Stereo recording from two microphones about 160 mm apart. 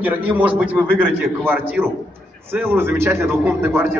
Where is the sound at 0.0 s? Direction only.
10° right (ahead or behind).